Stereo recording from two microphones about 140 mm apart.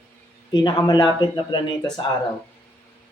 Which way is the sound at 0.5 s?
35° left (ahead or behind).